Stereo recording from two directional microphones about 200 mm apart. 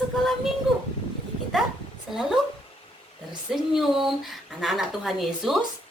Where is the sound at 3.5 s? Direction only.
Centre (ahead or behind).